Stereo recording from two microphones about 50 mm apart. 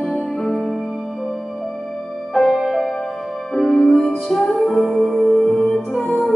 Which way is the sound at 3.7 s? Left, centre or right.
Centre.